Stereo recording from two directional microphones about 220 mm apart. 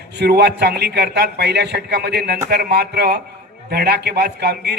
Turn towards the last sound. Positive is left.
turn(degrees=-50)  # may be behind; listen again after turning